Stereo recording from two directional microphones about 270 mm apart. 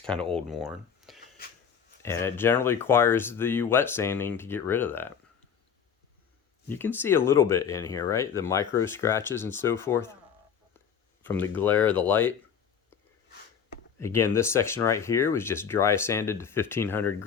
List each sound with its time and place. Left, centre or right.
0.0 s speech: centre
6.7 s speech: centre
11.2 s speech: centre
14.0 s speech: centre